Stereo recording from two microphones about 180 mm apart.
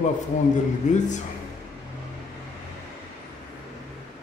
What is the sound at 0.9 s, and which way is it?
Speech, 45° left (ahead or behind).